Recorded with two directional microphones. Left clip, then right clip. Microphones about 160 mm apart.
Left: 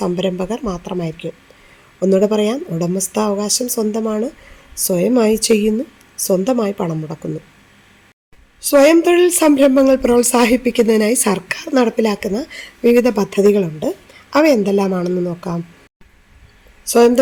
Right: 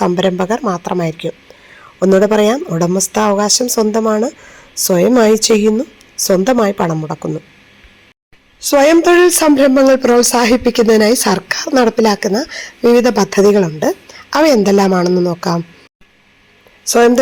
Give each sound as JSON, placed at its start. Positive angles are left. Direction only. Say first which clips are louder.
{"t": 0.0, "sound": "speech", "louder": "right 6 dB", "side_deg": -5}
{"t": 8.6, "sound": "speech", "louder": "right 2 dB", "side_deg": -5}
{"t": 16.8, "sound": "speech", "louder": "right 1 dB", "side_deg": -5}